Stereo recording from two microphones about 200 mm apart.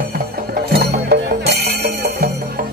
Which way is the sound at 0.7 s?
50° right (ahead or behind).